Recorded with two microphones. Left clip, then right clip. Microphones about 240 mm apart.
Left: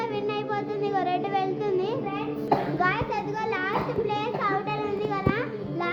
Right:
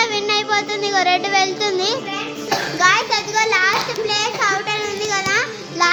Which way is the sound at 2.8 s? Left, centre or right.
Right.